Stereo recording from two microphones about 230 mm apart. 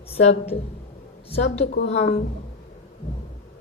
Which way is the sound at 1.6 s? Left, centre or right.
Left.